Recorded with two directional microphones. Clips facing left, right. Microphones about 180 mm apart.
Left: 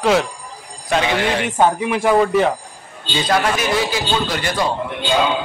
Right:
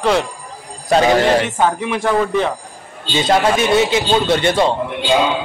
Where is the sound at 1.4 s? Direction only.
10° left (ahead or behind).